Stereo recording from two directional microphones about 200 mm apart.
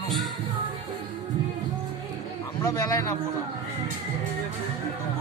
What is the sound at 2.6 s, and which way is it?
Speech, 15° left (ahead or behind).